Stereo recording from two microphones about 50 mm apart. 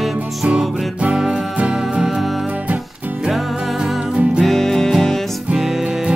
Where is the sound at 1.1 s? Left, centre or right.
Centre.